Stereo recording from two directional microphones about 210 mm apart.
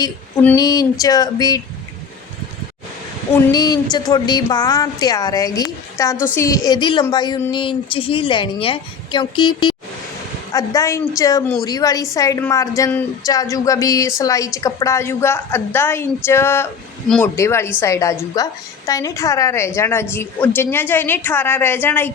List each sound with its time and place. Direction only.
0.0 s a woman's voice: 15° left (ahead or behind)
3.3 s a woman's voice: 20° left (ahead or behind)